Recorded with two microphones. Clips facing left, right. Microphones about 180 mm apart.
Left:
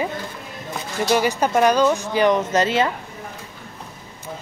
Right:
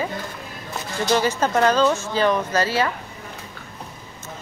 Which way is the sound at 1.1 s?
10° left (ahead or behind).